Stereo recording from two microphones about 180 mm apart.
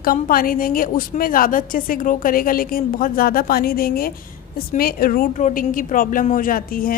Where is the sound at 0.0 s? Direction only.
55° left (ahead or behind).